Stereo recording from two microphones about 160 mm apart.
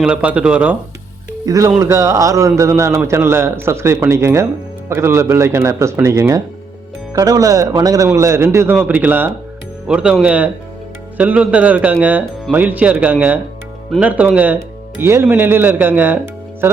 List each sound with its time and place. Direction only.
0.0 s a man's voice: 10° right (ahead or behind)
1.5 s a man's voice: 20° right (ahead or behind)